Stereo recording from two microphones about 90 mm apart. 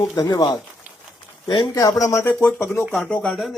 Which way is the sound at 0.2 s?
45° left (ahead or behind).